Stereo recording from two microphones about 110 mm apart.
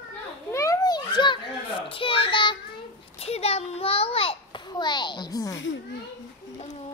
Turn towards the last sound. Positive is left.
turn(degrees=35)  # may be behind; listen again after turning